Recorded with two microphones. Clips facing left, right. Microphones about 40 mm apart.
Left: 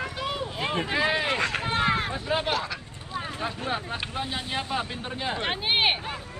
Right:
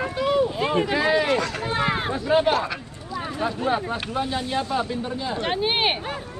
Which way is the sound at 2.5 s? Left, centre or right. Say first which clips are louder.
Right 5 dB; right.